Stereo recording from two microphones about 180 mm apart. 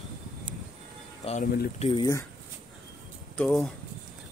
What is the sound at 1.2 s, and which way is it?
Speech, 35° left (ahead or behind).